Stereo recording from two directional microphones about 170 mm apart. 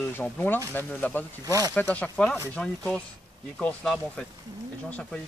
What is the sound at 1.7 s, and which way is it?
Speech, 10° left (ahead or behind).